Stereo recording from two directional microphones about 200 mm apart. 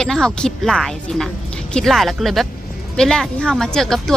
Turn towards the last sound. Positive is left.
turn(degrees=0)  # may be behind; listen again after turning